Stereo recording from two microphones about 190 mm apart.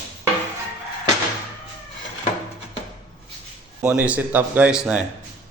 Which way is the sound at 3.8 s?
5° right (ahead or behind).